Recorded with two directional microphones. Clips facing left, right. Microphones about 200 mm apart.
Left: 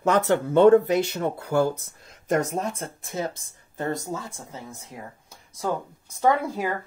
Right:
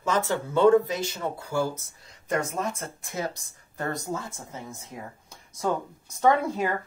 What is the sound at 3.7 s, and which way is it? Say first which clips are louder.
Speech: left 3 dB; 20° left (ahead or behind).